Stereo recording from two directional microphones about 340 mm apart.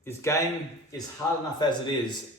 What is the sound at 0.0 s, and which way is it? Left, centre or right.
Speech, centre.